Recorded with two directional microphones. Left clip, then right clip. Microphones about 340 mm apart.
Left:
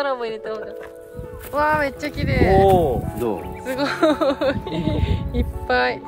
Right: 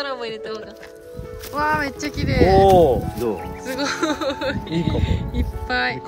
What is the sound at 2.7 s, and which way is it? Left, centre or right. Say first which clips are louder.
Speech: right 3 dB; right.